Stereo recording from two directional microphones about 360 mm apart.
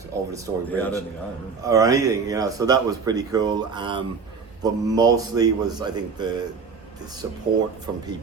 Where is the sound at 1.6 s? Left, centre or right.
Centre.